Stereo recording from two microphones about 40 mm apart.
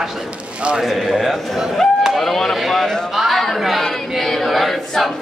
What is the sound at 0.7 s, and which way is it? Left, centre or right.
Speech, centre.